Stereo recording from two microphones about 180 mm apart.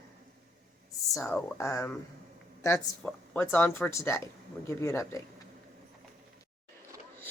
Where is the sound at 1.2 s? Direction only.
15° left (ahead or behind).